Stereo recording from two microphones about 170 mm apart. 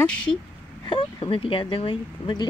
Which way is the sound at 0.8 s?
30° left (ahead or behind).